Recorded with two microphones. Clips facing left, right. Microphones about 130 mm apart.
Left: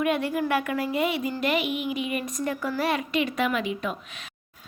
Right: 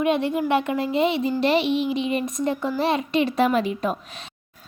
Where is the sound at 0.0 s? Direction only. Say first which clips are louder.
Right 3 dB; 25° right (ahead or behind).